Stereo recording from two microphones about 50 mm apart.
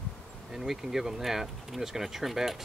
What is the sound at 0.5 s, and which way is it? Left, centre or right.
Speech, centre.